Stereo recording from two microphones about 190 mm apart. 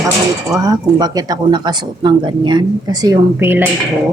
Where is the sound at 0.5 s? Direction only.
20° right (ahead or behind).